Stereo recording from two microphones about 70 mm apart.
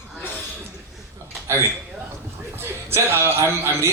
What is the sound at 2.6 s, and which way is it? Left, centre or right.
Speech, right.